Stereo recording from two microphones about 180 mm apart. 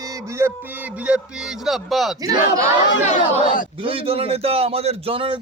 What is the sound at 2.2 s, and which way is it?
Speech, 20° right (ahead or behind).